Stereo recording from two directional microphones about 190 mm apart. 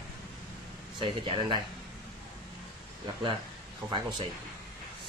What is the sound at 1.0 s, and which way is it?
Speech, 25° right (ahead or behind).